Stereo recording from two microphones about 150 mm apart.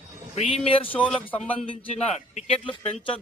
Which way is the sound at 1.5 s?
35° left (ahead or behind).